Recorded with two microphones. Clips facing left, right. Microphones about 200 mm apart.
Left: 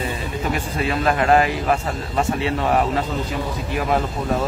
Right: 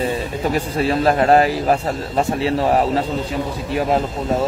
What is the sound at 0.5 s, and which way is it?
A man's voice, 35° right (ahead or behind).